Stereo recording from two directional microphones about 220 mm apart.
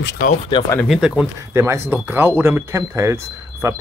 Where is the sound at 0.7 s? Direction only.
5° left (ahead or behind).